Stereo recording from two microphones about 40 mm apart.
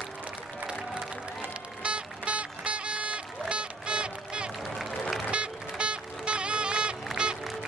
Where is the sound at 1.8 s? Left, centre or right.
Right.